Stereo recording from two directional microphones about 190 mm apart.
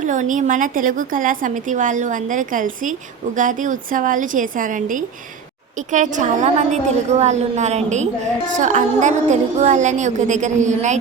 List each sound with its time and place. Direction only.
0.0 s a woman's voice: 40° right (ahead or behind)